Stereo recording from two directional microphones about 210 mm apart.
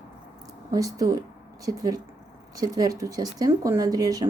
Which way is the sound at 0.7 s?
15° right (ahead or behind).